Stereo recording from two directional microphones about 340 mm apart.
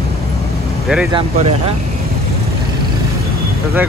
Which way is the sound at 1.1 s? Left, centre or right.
Centre.